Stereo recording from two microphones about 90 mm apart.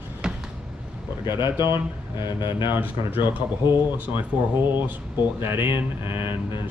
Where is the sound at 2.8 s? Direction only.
20° right (ahead or behind).